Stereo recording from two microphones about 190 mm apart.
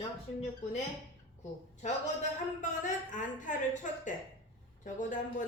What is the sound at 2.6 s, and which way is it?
Speech, 40° left (ahead or behind).